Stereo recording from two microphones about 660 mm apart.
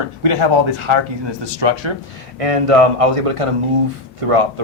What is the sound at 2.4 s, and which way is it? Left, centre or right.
Speech, right.